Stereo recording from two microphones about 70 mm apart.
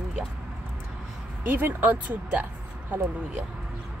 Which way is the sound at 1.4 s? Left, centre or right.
Right.